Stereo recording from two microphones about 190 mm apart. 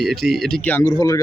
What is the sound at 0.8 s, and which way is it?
Speech, 20° left (ahead or behind).